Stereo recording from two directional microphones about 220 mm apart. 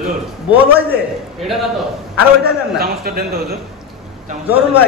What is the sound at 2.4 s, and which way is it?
A man's voice, 45° right (ahead or behind).